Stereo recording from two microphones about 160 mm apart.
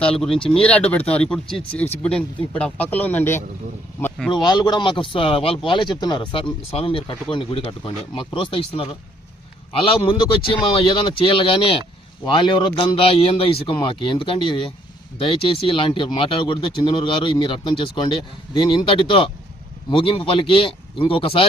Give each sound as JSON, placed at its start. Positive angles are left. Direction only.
{"t": 0.0, "sound": "speech", "side_deg": 5}
{"t": 4.3, "sound": "speech", "side_deg": 25}